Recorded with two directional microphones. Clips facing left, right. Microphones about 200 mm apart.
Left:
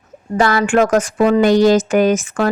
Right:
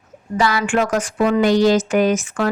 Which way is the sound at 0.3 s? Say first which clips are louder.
Left 4 dB; 50° left (ahead or behind).